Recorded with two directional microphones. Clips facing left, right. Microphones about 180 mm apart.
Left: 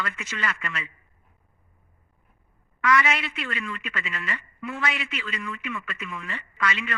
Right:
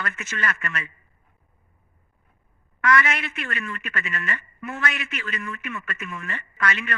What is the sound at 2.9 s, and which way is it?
Speech, 55° right (ahead or behind).